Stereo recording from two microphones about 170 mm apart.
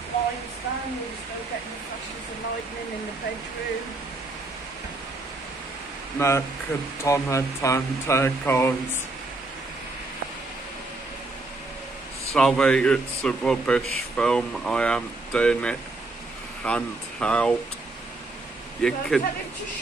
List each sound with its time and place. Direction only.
6.1 s speech: 15° left (ahead or behind)
12.4 s speech: 5° left (ahead or behind)
18.8 s speech: 5° left (ahead or behind)